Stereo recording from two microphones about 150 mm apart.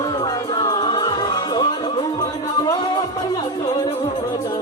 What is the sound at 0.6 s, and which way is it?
Music, 30° left (ahead or behind).